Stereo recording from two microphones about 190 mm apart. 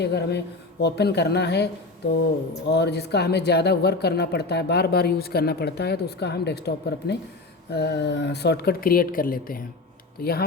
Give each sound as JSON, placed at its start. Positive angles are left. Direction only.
{"t": 0.0, "sound": "speech", "side_deg": 60}